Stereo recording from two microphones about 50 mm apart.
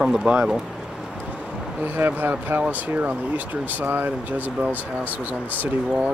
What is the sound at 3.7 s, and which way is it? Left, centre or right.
Speech, right.